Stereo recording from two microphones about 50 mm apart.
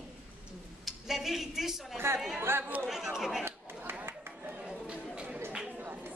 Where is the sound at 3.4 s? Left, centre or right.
Right.